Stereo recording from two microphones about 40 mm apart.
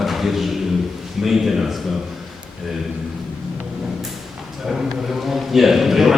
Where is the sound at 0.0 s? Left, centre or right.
Centre.